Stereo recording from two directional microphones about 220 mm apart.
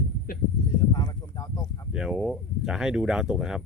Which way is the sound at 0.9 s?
20° left (ahead or behind).